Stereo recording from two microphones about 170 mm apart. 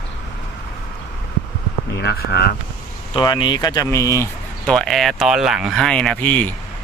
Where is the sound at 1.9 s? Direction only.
75° left (ahead or behind).